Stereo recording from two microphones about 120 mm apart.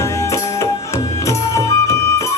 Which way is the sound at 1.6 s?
25° left (ahead or behind).